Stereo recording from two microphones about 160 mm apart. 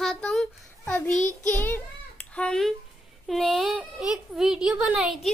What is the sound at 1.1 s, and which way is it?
Child singing, 50° left (ahead or behind).